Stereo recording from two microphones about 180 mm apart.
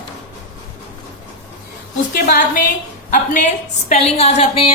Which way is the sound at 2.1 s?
55° left (ahead or behind).